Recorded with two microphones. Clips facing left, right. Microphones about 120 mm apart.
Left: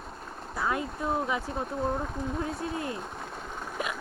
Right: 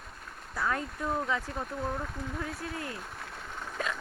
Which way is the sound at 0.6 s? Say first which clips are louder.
Left 2 dB; 15° left (ahead or behind).